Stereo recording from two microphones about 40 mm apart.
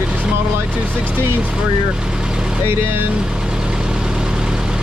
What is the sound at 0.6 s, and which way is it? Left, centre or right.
Speech, right.